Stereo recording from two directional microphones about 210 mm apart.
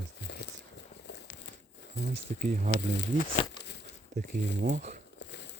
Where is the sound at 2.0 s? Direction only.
40° right (ahead or behind).